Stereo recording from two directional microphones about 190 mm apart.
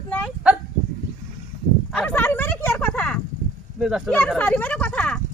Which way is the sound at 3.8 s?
Centre (ahead or behind).